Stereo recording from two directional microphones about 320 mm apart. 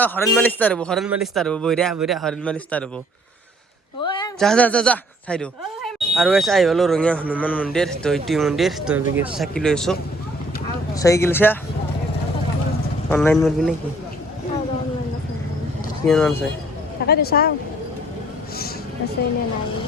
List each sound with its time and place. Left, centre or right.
0.0 s speech: centre
4.0 s a sound: centre
4.4 s speech: centre
9.4 s speech: centre
13.1 s speech: centre
16.0 s speech: centre
17.1 s speech: left